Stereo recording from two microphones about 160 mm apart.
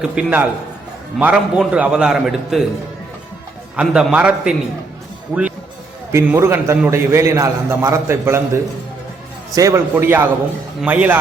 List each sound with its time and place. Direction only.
0.0 s a man's voice: 10° right (ahead or behind)
3.8 s a man's voice: 5° right (ahead or behind)
9.6 s a man's voice: 20° right (ahead or behind)